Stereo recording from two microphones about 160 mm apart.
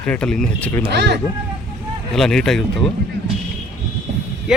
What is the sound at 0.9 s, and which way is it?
Speech, 90° right.